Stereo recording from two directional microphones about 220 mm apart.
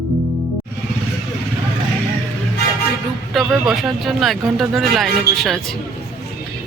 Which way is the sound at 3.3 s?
Centre (ahead or behind).